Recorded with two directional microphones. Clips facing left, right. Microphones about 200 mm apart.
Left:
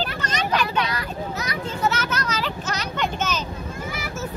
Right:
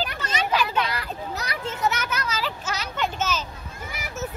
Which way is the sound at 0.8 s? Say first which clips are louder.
Left 2 dB; 30° right (ahead or behind).